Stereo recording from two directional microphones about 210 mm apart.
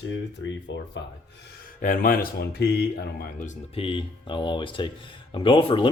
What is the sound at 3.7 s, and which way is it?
Speech, 25° left (ahead or behind).